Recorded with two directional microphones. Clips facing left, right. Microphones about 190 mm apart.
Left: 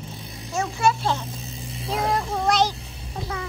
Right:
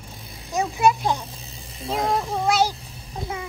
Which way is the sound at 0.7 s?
15° right (ahead or behind).